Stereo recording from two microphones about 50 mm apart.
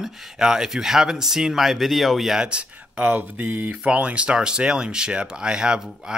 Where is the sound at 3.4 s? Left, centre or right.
Right.